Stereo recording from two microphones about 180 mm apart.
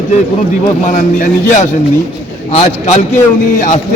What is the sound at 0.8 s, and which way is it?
A man's voice, 45° left (ahead or behind).